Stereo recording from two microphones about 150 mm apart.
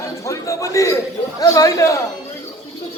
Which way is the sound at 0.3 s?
20° left (ahead or behind).